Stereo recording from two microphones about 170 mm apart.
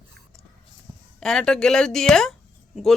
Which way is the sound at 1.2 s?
5° left (ahead or behind).